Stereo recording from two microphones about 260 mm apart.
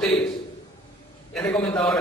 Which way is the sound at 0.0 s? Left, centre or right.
Centre.